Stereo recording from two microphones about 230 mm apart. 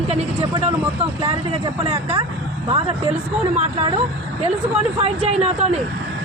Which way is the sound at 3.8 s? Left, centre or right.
Right.